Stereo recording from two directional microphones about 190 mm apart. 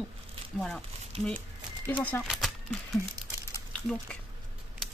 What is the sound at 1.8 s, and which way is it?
Speech, 10° left (ahead or behind).